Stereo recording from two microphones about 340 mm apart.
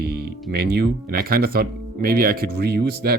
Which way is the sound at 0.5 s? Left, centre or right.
Right.